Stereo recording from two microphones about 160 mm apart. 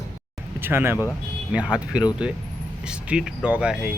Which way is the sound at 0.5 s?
15° right (ahead or behind).